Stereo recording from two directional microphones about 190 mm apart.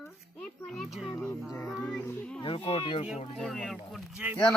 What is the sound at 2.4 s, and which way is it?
Speech, 30° left (ahead or behind).